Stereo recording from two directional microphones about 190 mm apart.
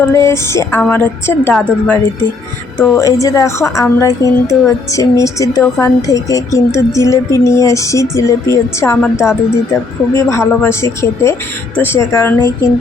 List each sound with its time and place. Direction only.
0.0 s a woman's voice: 15° left (ahead or behind)